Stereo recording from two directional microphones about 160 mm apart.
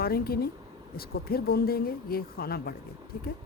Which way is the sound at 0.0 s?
70° left (ahead or behind).